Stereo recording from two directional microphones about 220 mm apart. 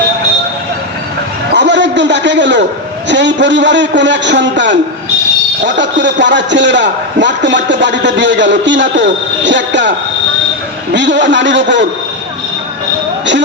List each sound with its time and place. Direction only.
1.5 s a sound: 55° right (ahead or behind)
3.1 s a man's voice: 55° right (ahead or behind)
10.9 s a man's voice: 55° right (ahead or behind)